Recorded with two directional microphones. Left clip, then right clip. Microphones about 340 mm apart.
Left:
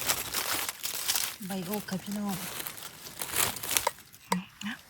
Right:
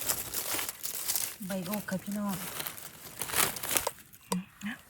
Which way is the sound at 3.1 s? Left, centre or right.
Centre.